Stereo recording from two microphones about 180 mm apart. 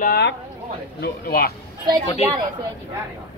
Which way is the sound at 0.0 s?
60° left (ahead or behind).